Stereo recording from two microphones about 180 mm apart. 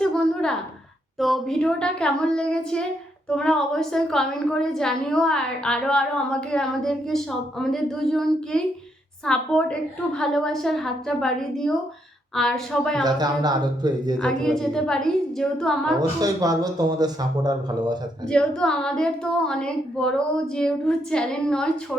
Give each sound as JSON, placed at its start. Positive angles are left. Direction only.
{"t": 0.0, "sound": "a sound", "side_deg": 5}
{"t": 1.2, "sound": "a woman's voice", "side_deg": 0}
{"t": 13.0, "sound": "speech", "side_deg": -20}
{"t": 14.2, "sound": "a woman's voice", "side_deg": 5}
{"t": 16.0, "sound": "speech", "side_deg": -20}
{"t": 18.3, "sound": "a woman's voice", "side_deg": 5}